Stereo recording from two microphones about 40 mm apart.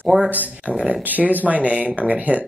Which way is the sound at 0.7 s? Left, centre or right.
Right.